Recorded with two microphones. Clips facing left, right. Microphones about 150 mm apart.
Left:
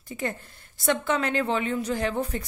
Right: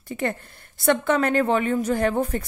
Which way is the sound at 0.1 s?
60° right (ahead or behind).